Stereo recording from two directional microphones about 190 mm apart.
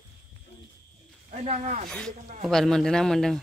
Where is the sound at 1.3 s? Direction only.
35° right (ahead or behind).